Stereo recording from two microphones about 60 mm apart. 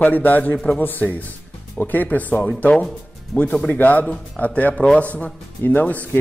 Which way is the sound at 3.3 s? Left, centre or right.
Left.